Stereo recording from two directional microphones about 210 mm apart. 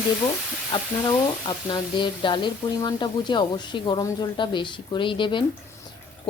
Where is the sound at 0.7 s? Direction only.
25° left (ahead or behind).